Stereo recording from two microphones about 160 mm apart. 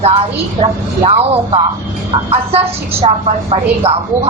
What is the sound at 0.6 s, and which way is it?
Speech, 40° right (ahead or behind).